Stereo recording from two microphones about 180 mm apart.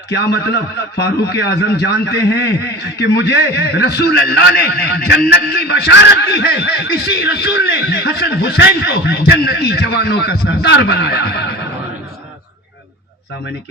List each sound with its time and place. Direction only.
0.1 s a man's voice: 65° left (ahead or behind)